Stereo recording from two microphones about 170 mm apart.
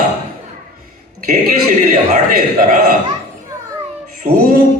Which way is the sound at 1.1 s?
50° right (ahead or behind).